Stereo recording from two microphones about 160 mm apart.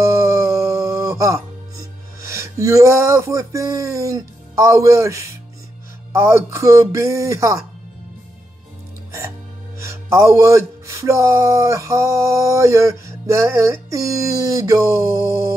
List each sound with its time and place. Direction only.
0.0 s music: 20° right (ahead or behind)
6.1 s speech: 15° right (ahead or behind)
9.8 s speech: 20° right (ahead or behind)